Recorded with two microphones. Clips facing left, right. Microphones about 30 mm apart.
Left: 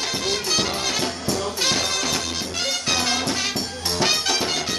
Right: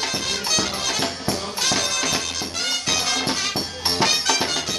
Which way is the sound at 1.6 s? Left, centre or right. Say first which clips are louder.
Right 1 dB; centre.